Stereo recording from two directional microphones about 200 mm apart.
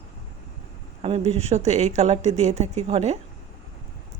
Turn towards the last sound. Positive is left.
turn(degrees=-30)  # may be behind; listen again after turning